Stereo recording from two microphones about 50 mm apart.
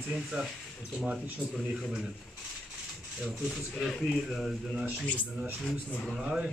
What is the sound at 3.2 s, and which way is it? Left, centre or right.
Speech, centre.